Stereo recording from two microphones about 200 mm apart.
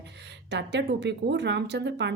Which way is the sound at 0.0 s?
60° right (ahead or behind).